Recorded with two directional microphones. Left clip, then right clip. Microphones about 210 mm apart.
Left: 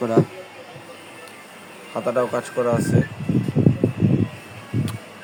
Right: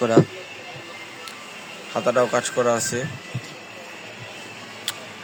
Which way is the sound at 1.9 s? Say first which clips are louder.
Right 2 dB; 5° left (ahead or behind).